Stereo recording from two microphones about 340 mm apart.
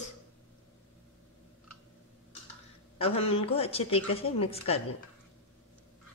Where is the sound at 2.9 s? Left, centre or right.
Centre.